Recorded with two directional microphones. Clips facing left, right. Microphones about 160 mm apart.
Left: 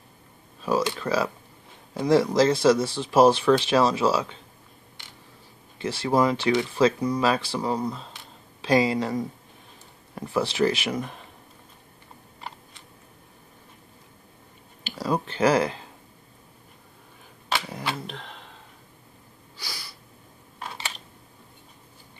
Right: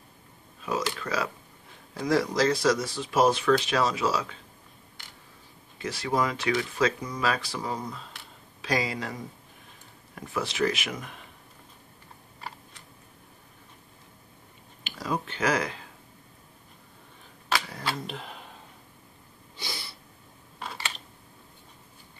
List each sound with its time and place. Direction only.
0.7 s speech: 30° left (ahead or behind)
5.8 s speech: 30° left (ahead or behind)
10.1 s speech: 30° left (ahead or behind)
14.8 s speech: 35° left (ahead or behind)
17.9 s speech: 5° right (ahead or behind)
19.5 s a sound: 20° right (ahead or behind)